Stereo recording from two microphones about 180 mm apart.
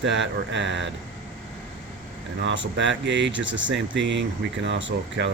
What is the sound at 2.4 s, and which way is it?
Speech, 85° right.